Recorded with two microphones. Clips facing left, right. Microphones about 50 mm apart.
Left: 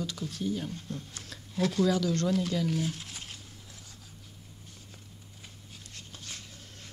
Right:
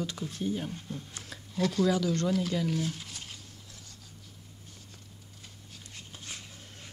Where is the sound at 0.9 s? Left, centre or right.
Centre.